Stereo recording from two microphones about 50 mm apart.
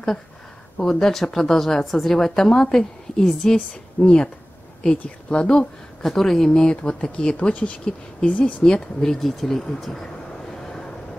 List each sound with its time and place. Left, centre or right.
0.8 s a woman's voice: centre; by 8.6 s left
8.6 s a woman's voice: centre
9.3 s speech: centre
10.5 s vehicle: centre